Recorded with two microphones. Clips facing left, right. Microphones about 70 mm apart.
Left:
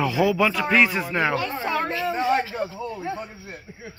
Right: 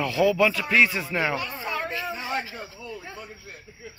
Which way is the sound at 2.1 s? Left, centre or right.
Left.